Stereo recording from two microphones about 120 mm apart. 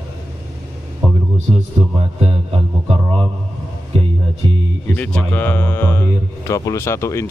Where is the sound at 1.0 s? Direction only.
Centre (ahead or behind).